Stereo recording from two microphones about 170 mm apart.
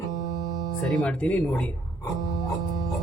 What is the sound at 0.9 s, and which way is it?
Speech, 5° left (ahead or behind).